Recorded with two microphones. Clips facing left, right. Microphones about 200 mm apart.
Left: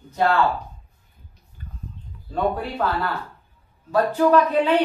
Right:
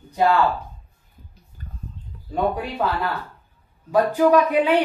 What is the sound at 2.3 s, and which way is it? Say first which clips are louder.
Speech: right 1 dB; 15° right (ahead or behind).